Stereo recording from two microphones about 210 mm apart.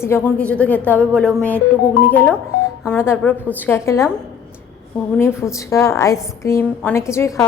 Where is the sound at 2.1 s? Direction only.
10° left (ahead or behind).